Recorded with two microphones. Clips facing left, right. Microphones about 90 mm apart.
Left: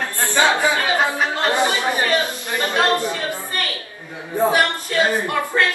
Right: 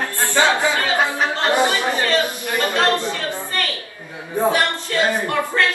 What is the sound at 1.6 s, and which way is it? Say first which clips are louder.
Chatter: right 1 dB; 20° left (ahead or behind).